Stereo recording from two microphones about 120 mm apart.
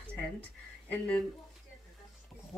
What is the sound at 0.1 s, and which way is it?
Speech, 10° left (ahead or behind).